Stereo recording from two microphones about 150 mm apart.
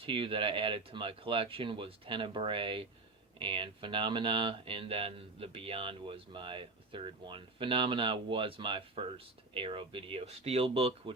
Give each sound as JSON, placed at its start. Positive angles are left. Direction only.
{"t": 0.0, "sound": "speech", "side_deg": -35}